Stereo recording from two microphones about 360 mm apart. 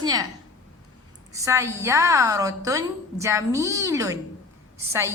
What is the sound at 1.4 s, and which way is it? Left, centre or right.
A woman's voice, centre.